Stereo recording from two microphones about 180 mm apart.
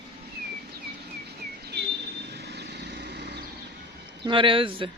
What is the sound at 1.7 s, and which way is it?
Vehicle, 65° right (ahead or behind).